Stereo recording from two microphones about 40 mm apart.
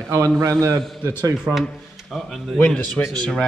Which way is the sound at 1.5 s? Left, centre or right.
Right.